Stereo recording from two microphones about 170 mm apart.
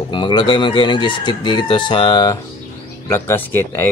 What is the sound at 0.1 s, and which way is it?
Speech, 25° left (ahead or behind).